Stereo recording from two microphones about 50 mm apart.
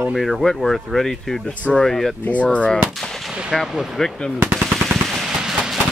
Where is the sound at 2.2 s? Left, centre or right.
Left.